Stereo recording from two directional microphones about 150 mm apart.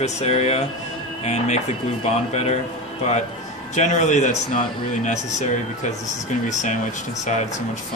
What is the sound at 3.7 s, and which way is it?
Speech, 55° left (ahead or behind).